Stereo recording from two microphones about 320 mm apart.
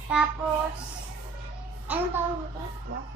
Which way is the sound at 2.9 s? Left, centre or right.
Right.